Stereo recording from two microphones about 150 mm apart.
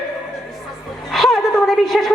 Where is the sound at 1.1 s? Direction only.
Centre (ahead or behind).